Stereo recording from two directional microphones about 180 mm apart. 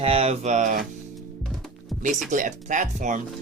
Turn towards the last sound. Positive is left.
turn(degrees=-45)  # may be behind; listen again after turning